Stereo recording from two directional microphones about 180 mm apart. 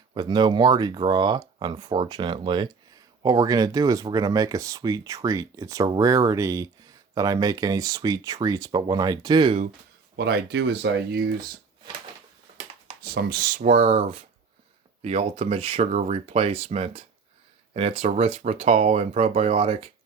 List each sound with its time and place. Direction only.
0.1 s speech: 25° right (ahead or behind)
10.2 s speech: 65° right (ahead or behind)
13.0 s speech: 65° right (ahead or behind); by 19.9 s 35° right (ahead or behind)